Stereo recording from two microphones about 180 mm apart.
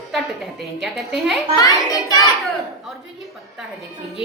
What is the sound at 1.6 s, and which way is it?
Speech, 20° left (ahead or behind).